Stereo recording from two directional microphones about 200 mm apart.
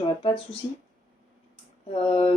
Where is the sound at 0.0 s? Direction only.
25° left (ahead or behind).